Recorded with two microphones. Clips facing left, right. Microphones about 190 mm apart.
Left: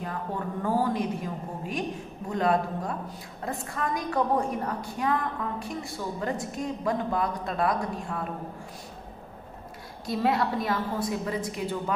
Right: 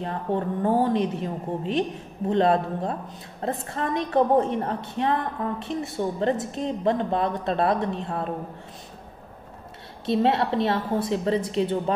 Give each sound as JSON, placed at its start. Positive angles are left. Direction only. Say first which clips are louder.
{"t": 0.0, "sound": "a woman's voice", "louder": "right 6 dB", "side_deg": -25}
{"t": 10.0, "sound": "a woman's voice", "louder": "right 4 dB", "side_deg": -25}